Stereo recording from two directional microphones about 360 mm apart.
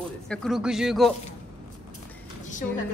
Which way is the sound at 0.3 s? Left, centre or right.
Centre.